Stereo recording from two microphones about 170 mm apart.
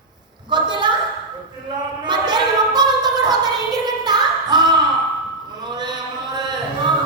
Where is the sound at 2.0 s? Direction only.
25° right (ahead or behind).